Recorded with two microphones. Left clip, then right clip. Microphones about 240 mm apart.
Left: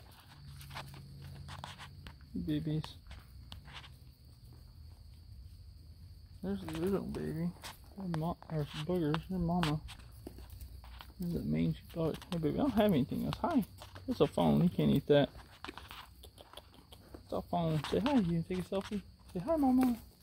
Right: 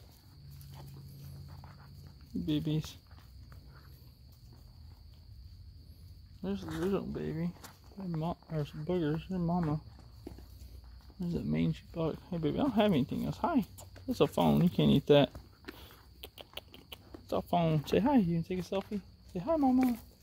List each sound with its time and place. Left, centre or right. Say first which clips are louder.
2.4 s speech: right 3 dB; centre
6.4 s speech: right 2 dB; centre
9.4 s speech: right 1 dB; right
11.3 s speech: right 2 dB; centre
16.2 s cricket: right 6 dB; right
18.3 s speech: right 2 dB; centre